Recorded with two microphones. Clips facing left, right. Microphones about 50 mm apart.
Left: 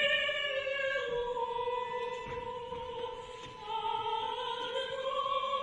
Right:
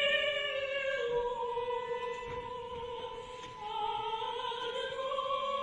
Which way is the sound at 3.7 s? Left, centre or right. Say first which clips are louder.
Left 1 dB; left.